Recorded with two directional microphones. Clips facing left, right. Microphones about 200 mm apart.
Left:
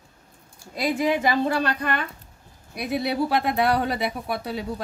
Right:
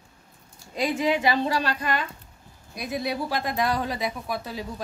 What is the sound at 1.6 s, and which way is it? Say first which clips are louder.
Speech: left 2 dB; 55° left (ahead or behind).